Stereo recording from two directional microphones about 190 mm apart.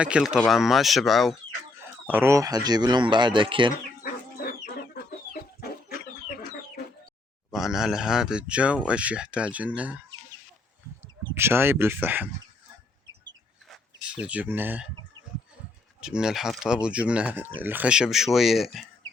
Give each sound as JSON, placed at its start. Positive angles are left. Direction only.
{"t": 0.0, "sound": "speech", "side_deg": -5}
{"t": 2.0, "sound": "speech", "side_deg": -10}
{"t": 4.0, "sound": "chicken", "side_deg": 55}
{"t": 7.5, "sound": "speech", "side_deg": 0}
{"t": 11.3, "sound": "speech", "side_deg": -10}
{"t": 13.7, "sound": "chicken", "side_deg": -5}
{"t": 16.0, "sound": "speech", "side_deg": -5}